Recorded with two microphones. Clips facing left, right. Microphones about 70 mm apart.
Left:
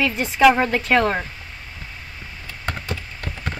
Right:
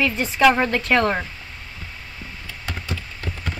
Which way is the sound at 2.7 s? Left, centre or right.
Left.